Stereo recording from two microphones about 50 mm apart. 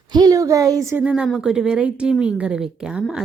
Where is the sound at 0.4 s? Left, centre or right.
Right.